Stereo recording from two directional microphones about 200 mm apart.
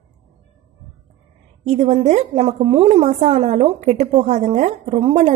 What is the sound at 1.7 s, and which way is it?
A woman's voice, 35° right (ahead or behind).